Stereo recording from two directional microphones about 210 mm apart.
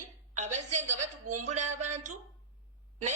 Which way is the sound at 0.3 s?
35° right (ahead or behind).